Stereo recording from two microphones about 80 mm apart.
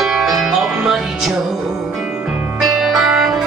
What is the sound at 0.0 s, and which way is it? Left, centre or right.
Music, centre.